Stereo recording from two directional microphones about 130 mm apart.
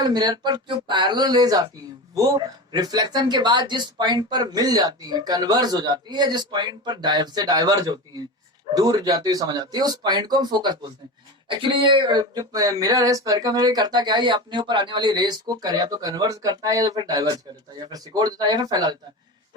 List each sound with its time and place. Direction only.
0.0 s speech: 30° right (ahead or behind)